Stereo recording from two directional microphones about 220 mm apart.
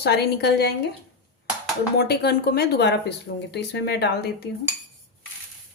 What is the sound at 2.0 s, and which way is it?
Speech, 45° left (ahead or behind).